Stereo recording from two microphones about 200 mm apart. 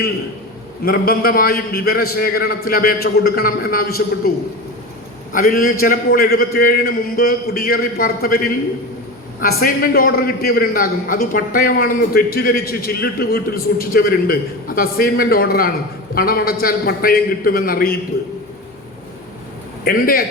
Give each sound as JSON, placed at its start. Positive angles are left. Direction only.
{"t": 0.9, "sound": "a man's voice", "side_deg": 50}
{"t": 5.3, "sound": "a man's voice", "side_deg": 45}
{"t": 19.8, "sound": "a man's voice", "side_deg": 45}